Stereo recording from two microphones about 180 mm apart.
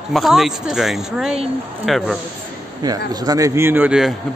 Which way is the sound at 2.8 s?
20° right (ahead or behind).